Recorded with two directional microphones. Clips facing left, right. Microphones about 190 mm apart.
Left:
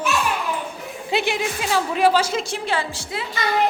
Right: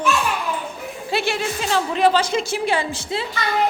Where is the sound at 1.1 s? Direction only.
20° left (ahead or behind).